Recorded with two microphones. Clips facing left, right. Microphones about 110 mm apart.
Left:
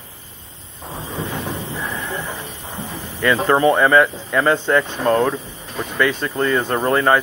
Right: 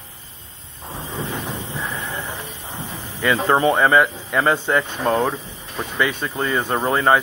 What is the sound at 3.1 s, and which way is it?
Speech, 15° right (ahead or behind).